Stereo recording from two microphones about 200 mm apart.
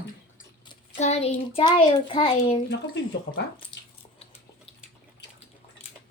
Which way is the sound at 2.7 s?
60° left (ahead or behind).